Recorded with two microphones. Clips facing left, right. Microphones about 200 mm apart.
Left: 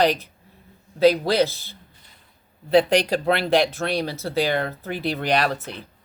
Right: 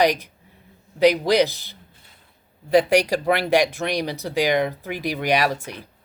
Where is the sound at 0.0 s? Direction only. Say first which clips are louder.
Right 1 dB; 15° right (ahead or behind).